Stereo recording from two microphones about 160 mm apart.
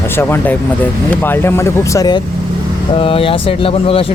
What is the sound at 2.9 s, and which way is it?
Speech, 35° left (ahead or behind).